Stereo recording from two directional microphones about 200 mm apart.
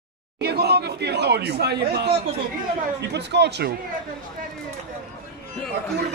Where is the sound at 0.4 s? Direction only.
55° right (ahead or behind).